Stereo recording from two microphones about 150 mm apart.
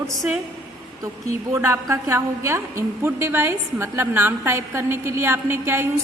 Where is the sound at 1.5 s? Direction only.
20° right (ahead or behind).